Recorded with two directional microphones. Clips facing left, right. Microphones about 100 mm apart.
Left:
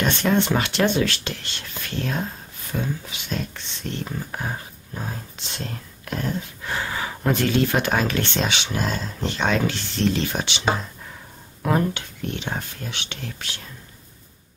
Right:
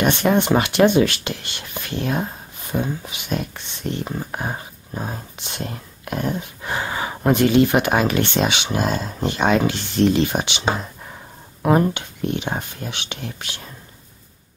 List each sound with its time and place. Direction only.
0.0 s speech: 15° right (ahead or behind)